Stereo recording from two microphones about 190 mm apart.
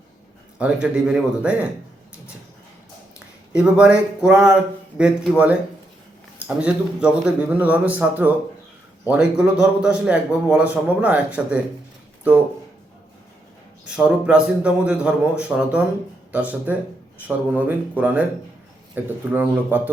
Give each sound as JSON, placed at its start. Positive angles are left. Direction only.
{"t": 0.6, "sound": "a man's voice", "side_deg": -5}
{"t": 3.2, "sound": "speech", "side_deg": -5}
{"t": 6.6, "sound": "a man's voice", "side_deg": -5}
{"t": 13.9, "sound": "a man's voice", "side_deg": -5}